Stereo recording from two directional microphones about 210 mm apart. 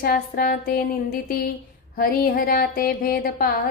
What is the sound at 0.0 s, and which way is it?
Speech, 45° left (ahead or behind).